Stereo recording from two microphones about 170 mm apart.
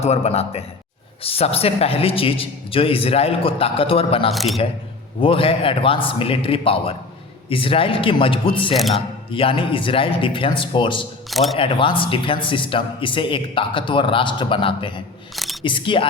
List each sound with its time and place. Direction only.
0.0 s a man's voice: 40° left (ahead or behind)
4.3 s speech: centre (ahead or behind)
5.2 s a man's voice: 30° left (ahead or behind)
8.7 s speech: centre (ahead or behind)
9.0 s a man's voice: 30° left (ahead or behind)
11.3 s speech: centre (ahead or behind)
11.5 s a man's voice: 30° left (ahead or behind)